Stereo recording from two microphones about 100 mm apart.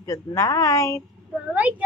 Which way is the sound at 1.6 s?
15° right (ahead or behind).